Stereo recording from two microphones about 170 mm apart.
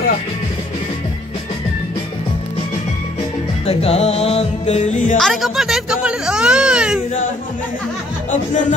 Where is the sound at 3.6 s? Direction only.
35° left (ahead or behind).